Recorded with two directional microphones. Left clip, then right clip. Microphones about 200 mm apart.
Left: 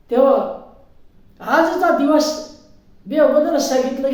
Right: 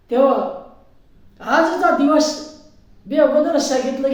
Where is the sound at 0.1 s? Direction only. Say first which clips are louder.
Even; 5° left (ahead or behind).